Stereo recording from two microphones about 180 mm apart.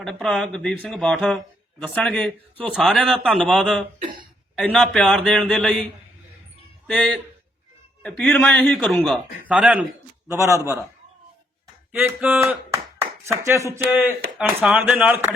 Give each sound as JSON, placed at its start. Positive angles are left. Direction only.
{"t": 0.0, "sound": "speech", "side_deg": 5}
{"t": 6.8, "sound": "speech", "side_deg": 5}
{"t": 9.5, "sound": "speech", "side_deg": -5}
{"t": 10.2, "sound": "speech", "side_deg": -20}
{"t": 11.9, "sound": "speech", "side_deg": -10}
{"t": 14.1, "sound": "speech", "side_deg": -5}